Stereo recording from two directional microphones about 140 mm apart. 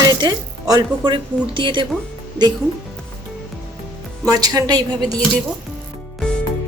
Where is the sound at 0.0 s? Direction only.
30° right (ahead or behind).